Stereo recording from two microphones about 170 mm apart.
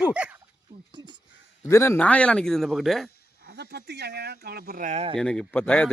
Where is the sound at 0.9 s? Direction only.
25° right (ahead or behind).